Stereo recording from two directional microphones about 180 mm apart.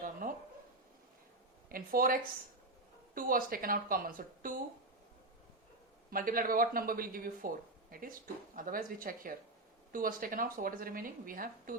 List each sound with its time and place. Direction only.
0.0 s a sound: 50° right (ahead or behind)
1.7 s speech: 50° right (ahead or behind)
3.2 s speech: 50° right (ahead or behind)
6.1 s speech: 50° right (ahead or behind)